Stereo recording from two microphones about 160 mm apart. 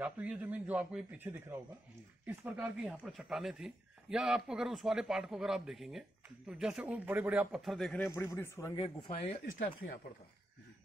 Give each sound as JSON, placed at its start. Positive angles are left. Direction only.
{"t": 0.0, "sound": "a man's voice", "side_deg": -10}
{"t": 8.0, "sound": "speech", "side_deg": 15}
{"t": 9.4, "sound": "speech", "side_deg": 65}